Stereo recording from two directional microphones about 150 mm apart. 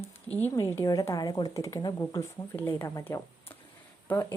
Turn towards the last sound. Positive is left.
turn(degrees=10)  # may be behind; listen again after turning